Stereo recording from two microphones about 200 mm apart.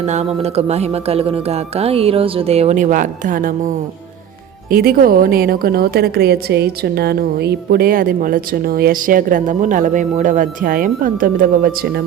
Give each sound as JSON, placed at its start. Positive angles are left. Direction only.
{"t": 0.0, "sound": "speech", "side_deg": -35}
{"t": 4.7, "sound": "a woman's voice", "side_deg": -45}